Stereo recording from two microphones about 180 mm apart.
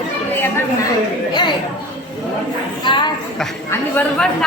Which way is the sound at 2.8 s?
25° left (ahead or behind).